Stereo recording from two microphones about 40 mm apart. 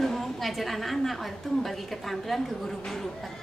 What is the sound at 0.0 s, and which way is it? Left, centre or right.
A woman's voice, centre.